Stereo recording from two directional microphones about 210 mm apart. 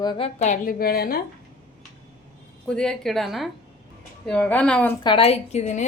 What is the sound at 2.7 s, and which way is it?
A woman's voice, 5° left (ahead or behind).